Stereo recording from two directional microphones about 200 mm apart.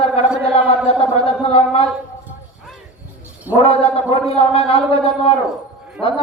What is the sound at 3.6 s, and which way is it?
Speech, 30° left (ahead or behind).